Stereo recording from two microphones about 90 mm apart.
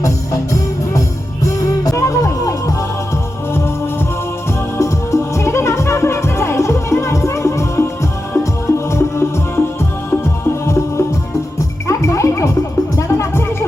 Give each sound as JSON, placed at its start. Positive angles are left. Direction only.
{"t": 1.5, "sound": "music", "side_deg": 40}
{"t": 4.8, "sound": "music", "side_deg": 35}